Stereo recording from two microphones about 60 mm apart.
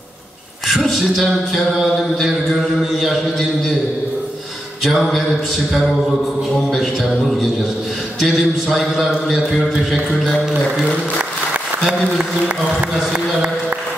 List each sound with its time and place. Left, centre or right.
0.9 s a man's voice: centre
4.8 s a man's voice: centre
6.7 s a man's voice: centre
11.8 s a man's voice: centre
13.1 s a sound: right